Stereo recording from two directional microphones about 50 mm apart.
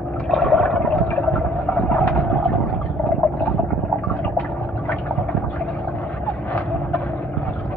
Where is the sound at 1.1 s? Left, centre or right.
Left.